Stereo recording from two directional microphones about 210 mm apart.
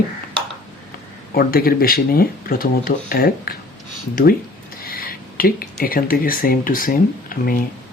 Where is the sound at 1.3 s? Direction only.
45° left (ahead or behind).